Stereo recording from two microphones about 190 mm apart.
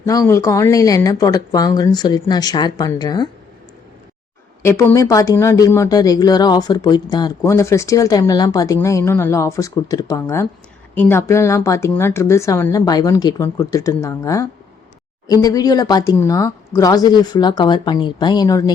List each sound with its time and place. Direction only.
0.0 s speech: 15° left (ahead or behind)
4.6 s speech: 15° left (ahead or behind)